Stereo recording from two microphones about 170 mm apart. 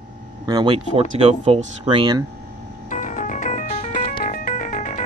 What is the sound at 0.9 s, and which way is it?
Speech, 35° right (ahead or behind).